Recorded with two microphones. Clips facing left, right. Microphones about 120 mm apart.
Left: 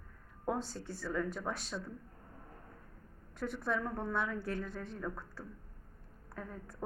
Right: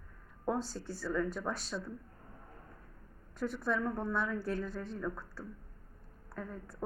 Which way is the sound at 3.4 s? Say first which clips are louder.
Right 2 dB; centre (ahead or behind).